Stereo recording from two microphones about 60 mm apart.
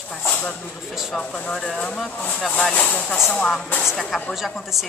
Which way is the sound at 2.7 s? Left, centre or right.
Left.